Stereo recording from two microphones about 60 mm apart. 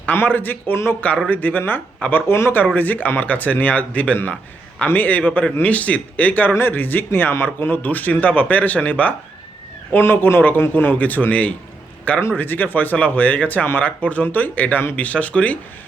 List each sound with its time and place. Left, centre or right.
0.3 s speech: left
2.7 s speech: left
6.5 s speech: left
9.9 s speech: left